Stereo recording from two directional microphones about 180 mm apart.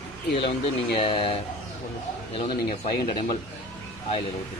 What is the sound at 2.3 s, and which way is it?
Speech, 30° left (ahead or behind).